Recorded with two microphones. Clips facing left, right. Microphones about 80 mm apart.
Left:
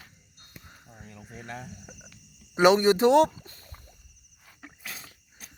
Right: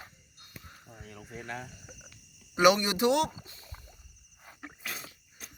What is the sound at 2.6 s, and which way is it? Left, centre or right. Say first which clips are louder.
Speech: left 4 dB; left.